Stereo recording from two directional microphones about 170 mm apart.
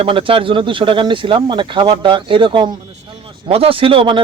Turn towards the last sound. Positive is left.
turn(degrees=-30)  # may be behind; listen again after turning